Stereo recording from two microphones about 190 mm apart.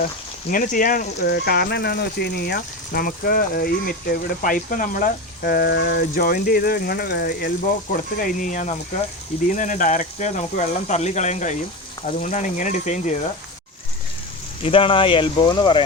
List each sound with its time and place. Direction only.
0.5 s speech: 45° left (ahead or behind)
14.6 s speech: 30° left (ahead or behind)